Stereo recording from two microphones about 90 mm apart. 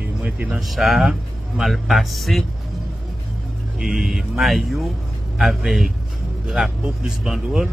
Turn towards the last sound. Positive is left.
turn(degrees=-5)  # may be behind; listen again after turning